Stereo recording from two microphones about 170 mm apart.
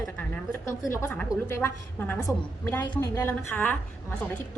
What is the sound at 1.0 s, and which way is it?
A woman's voice, 10° left (ahead or behind).